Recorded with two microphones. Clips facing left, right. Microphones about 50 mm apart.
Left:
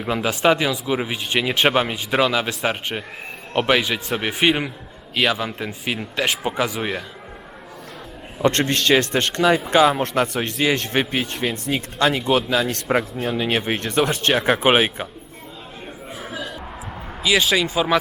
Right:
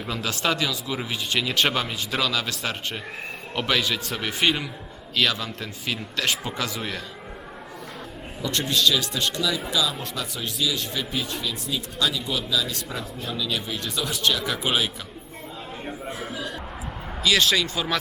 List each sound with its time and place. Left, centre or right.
0.0 s speech: left
8.4 s speech: left
17.2 s speech: centre